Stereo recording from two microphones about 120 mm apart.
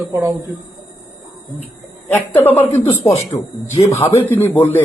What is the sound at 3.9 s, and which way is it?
Speech, 15° left (ahead or behind).